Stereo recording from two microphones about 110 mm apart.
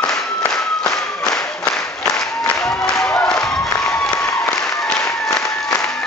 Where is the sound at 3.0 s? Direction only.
15° left (ahead or behind).